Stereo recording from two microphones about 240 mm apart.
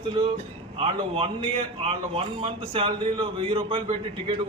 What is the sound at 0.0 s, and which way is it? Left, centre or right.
A man's voice, right.